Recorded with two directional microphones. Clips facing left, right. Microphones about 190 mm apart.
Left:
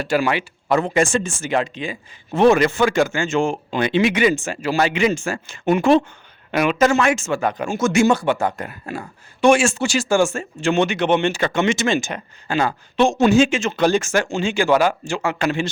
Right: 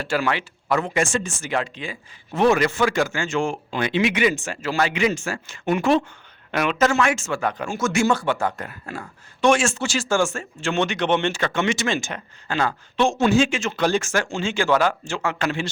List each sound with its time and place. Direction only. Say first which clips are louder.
0.0 s speech: left 4 dB; 15° left (ahead or behind)
0.7 s a man's voice: left 4 dB; 30° left (ahead or behind)
4.0 s speech: left 2 dB; 35° left (ahead or behind)
4.6 s a man's voice: left 3 dB; 15° left (ahead or behind)
6.5 s speech: left 4 dB; 10° left (ahead or behind)
10.8 s speech: left 3 dB; 5° left (ahead or behind)